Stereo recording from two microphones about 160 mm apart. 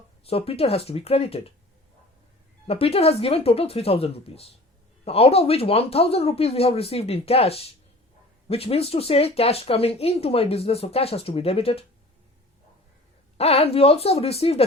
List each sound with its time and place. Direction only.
0.3 s speech: 35° left (ahead or behind)
2.6 s speech: 40° left (ahead or behind)
13.3 s speech: 40° left (ahead or behind)